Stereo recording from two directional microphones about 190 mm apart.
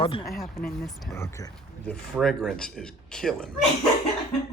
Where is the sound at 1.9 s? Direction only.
5° left (ahead or behind).